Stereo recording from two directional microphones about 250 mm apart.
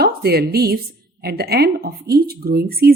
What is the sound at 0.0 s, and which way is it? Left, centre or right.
A woman's voice, right.